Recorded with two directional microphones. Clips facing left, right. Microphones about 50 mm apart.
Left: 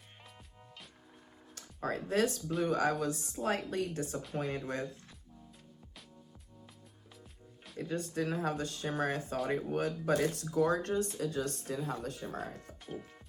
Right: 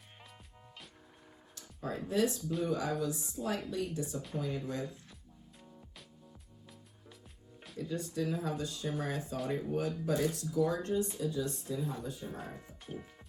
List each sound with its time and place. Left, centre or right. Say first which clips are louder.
1.5 s speech: left 3 dB; left
7.8 s speech: left 1 dB; left